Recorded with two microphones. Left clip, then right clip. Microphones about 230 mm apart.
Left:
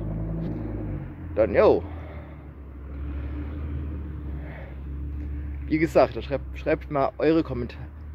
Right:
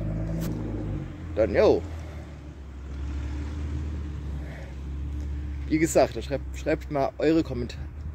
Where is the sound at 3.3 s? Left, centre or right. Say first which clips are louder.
Left 2 dB; right.